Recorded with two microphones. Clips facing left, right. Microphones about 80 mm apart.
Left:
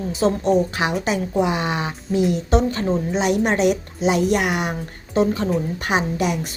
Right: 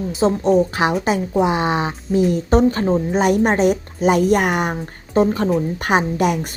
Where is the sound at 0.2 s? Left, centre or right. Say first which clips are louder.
Right 3 dB; right.